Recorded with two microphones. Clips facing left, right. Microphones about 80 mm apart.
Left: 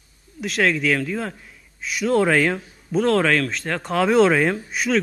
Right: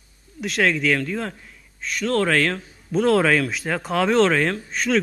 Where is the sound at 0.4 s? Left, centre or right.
Centre.